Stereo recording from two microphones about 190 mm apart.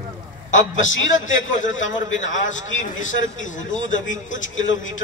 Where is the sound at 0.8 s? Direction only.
90° left.